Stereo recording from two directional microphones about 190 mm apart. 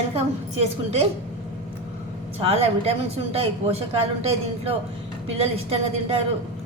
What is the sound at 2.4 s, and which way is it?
A woman's voice, 30° right (ahead or behind).